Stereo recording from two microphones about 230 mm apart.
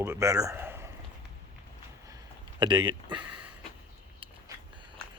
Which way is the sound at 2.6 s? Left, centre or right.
Centre.